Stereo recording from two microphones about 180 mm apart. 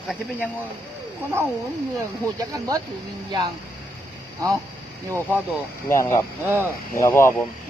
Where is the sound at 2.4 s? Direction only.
20° right (ahead or behind).